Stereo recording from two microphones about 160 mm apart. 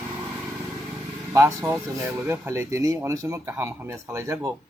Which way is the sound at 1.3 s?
20° right (ahead or behind).